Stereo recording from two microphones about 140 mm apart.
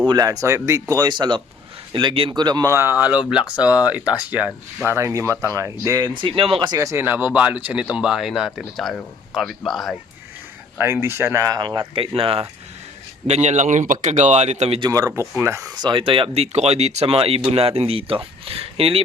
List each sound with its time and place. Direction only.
0.0 s speech: 30° right (ahead or behind); by 4.9 s 10° right (ahead or behind)
4.9 s a man's voice: 20° right (ahead or behind); by 10.0 s centre (ahead or behind)
10.8 s speech: 15° right (ahead or behind); by 12.5 s 45° right (ahead or behind)
13.2 s speech: 55° right (ahead or behind)
14.8 s speech: 25° right (ahead or behind); by 19.0 s 45° right (ahead or behind)